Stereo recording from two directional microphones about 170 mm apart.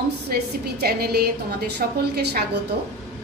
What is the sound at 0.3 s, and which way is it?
A woman's voice, 65° right (ahead or behind).